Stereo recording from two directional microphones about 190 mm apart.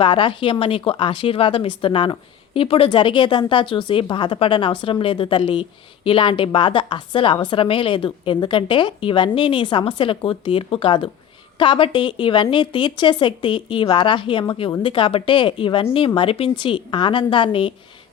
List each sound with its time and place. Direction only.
0.0 s a woman's voice: 25° left (ahead or behind)